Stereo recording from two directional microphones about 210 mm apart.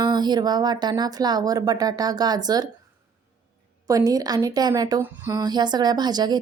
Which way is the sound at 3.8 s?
15° right (ahead or behind).